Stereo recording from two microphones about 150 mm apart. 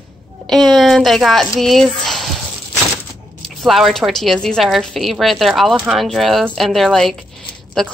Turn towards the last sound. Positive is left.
turn(degrees=5)  # may be behind; listen again after turning